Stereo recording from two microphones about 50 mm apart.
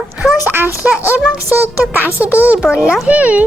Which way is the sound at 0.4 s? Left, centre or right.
Right.